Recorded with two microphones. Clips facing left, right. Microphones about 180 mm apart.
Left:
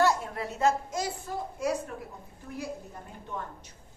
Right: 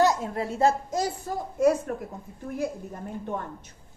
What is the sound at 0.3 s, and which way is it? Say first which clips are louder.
Speech: right 4 dB; 30° right (ahead or behind).